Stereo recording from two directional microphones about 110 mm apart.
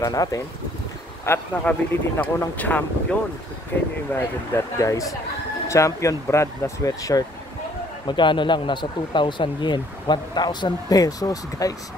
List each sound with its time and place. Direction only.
0.0 s speech: 35° left (ahead or behind)
1.6 s speech: 15° left (ahead or behind)
4.1 s speech: 25° left (ahead or behind)
8.1 s speech: 45° left (ahead or behind)